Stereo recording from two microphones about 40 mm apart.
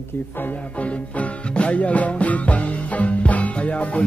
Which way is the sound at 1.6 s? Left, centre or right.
Left.